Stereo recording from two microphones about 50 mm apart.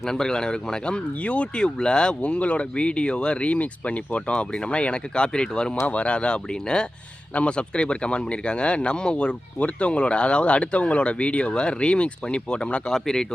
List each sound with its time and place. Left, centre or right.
0.0 s speech: centre
5.8 s speech: left
12.9 s speech: centre